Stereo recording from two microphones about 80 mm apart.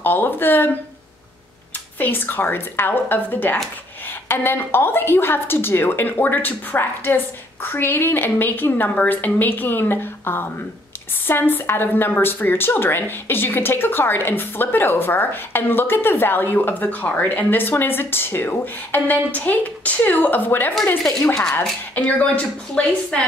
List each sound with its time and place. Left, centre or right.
0.0 s a woman's voice: left
2.0 s a woman's voice: left